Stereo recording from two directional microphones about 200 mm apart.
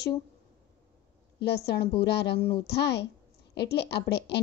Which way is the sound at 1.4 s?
55° left (ahead or behind).